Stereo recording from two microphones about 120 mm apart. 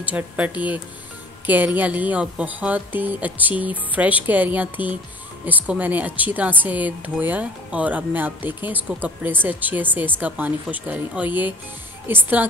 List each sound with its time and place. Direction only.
0.0 s speech: 10° right (ahead or behind)